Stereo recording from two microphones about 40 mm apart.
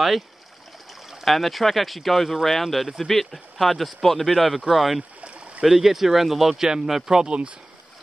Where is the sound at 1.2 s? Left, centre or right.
Centre.